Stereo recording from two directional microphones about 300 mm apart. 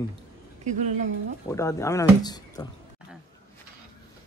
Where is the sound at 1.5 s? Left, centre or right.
Centre.